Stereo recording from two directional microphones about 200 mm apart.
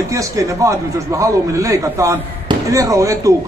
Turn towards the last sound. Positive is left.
turn(degrees=-15)  # may be behind; listen again after turning